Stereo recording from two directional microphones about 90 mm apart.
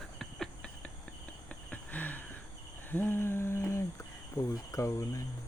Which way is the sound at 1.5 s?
15° left (ahead or behind).